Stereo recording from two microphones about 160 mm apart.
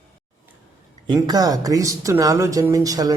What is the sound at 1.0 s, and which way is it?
Speech, 25° right (ahead or behind).